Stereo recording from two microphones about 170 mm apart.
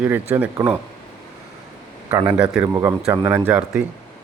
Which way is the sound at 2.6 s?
15° right (ahead or behind).